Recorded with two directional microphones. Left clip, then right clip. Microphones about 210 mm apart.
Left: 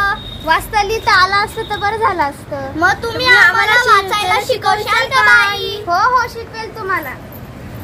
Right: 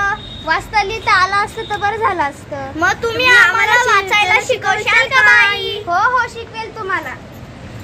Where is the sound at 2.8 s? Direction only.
50° right (ahead or behind).